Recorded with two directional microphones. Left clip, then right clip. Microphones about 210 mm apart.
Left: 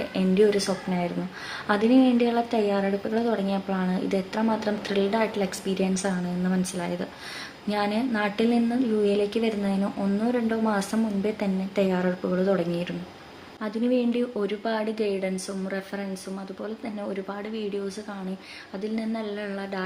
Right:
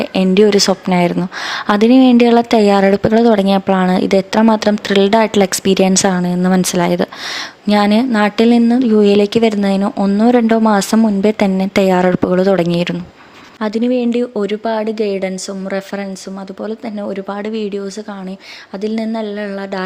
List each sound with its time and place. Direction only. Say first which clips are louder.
0.0 s a woman's voice: right 10 dB; 45° right (ahead or behind)
16.6 s a woman's voice: right 11 dB; 40° right (ahead or behind)
18.8 s speech: right 12 dB; 40° right (ahead or behind)